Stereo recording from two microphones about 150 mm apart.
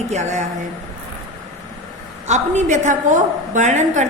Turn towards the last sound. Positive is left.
turn(degrees=-55)  # may be behind; listen again after turning